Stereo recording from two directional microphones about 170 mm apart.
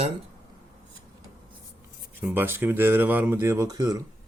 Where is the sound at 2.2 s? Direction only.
10° right (ahead or behind).